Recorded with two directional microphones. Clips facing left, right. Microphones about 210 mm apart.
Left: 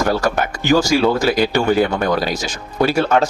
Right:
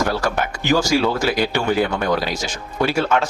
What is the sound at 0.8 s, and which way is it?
Speech, 40° left (ahead or behind).